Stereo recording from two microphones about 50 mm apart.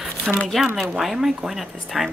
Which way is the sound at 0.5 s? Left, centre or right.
Centre.